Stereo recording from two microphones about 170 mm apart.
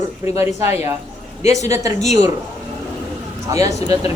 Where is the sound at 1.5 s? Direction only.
20° right (ahead or behind).